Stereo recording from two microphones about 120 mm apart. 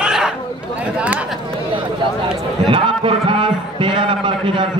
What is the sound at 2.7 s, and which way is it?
A man's voice, 45° right (ahead or behind).